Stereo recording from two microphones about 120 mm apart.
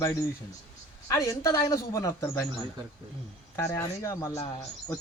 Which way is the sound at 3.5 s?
25° left (ahead or behind).